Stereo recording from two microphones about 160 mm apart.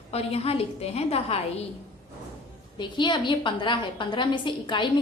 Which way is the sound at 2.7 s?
30° left (ahead or behind).